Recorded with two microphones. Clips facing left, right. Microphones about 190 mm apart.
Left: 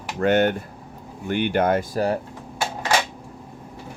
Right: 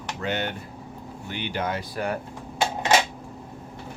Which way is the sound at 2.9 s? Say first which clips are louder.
Right 1 dB; 20° right (ahead or behind).